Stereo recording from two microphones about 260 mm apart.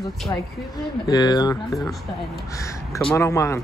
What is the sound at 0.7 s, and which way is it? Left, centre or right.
Speech, centre.